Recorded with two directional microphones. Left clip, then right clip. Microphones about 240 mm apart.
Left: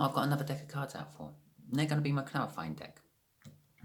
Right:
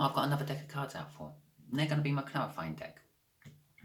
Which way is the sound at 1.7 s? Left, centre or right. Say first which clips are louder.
Even; left.